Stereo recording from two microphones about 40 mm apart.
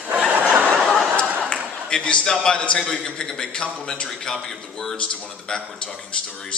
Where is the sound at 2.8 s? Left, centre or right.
Centre.